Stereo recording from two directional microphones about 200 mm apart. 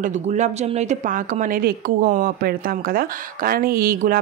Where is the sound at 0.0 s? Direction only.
35° right (ahead or behind).